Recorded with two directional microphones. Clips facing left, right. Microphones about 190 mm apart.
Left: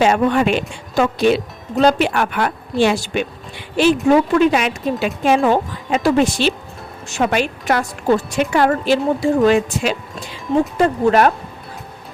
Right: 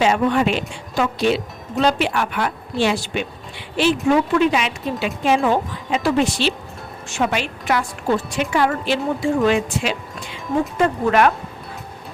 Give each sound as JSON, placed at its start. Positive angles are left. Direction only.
{"t": 0.0, "sound": "a woman's voice", "side_deg": 50}